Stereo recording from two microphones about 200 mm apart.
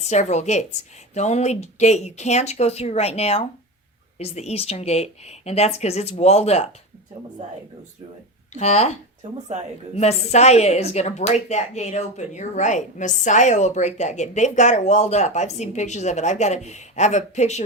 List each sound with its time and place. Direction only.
0.0 s speech: 35° left (ahead or behind)
8.5 s speech: 35° left (ahead or behind)
9.9 s speech: 30° left (ahead or behind)